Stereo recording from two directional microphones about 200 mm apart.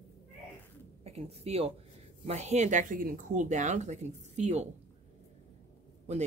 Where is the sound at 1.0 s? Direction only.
30° right (ahead or behind).